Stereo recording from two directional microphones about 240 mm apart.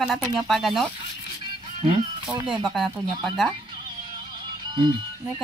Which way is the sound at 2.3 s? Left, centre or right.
Centre.